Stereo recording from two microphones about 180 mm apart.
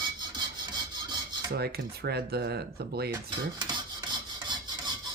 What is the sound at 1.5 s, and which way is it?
Speech, 65° right (ahead or behind).